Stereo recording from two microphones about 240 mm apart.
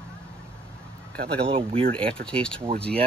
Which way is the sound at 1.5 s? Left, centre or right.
Right.